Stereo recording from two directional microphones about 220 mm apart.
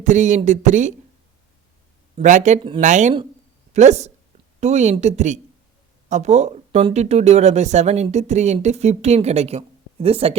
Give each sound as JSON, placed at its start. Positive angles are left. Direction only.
{"t": 0.0, "sound": "speech", "side_deg": -35}
{"t": 2.1, "sound": "speech", "side_deg": -35}